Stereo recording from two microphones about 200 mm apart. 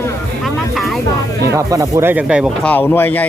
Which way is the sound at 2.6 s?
10° left (ahead or behind).